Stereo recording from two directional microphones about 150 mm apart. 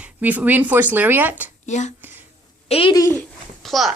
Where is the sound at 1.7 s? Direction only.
50° left (ahead or behind).